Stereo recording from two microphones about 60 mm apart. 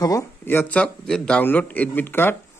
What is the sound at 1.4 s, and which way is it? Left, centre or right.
Speech, left.